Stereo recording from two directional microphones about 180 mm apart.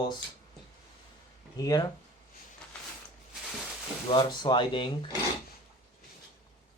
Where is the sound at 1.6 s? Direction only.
20° left (ahead or behind).